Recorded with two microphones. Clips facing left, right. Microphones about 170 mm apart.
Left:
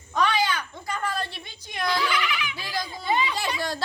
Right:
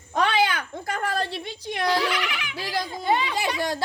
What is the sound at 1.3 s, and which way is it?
A child's voice, 75° right (ahead or behind).